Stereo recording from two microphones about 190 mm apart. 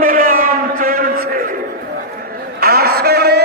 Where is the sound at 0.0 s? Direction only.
45° right (ahead or behind).